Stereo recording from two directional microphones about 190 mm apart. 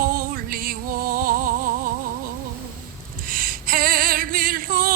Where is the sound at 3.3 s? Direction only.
50° right (ahead or behind).